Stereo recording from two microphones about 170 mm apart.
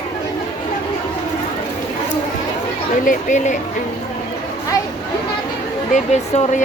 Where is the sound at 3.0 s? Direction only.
50° left (ahead or behind).